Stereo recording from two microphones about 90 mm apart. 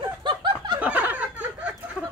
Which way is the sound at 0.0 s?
60° right (ahead or behind).